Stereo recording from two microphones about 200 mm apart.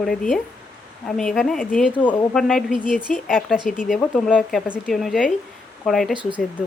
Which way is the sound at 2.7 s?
40° left (ahead or behind).